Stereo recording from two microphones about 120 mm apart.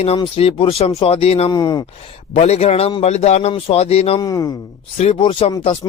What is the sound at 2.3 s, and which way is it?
Speech, 65° left (ahead or behind).